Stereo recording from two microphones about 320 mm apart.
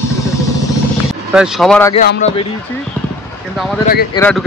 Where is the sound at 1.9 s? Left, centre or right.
Left.